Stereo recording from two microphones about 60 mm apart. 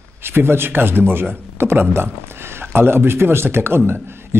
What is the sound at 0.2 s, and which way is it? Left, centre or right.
Speech, right.